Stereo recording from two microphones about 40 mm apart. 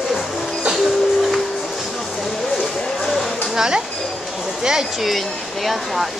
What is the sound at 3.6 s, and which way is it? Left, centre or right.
Speech, centre.